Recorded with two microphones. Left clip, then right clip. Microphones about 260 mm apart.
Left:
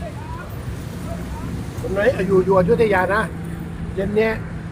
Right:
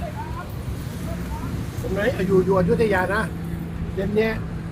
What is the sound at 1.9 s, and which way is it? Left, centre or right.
Speech, centre.